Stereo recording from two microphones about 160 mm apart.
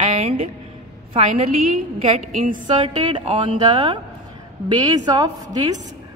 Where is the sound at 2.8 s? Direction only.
30° right (ahead or behind).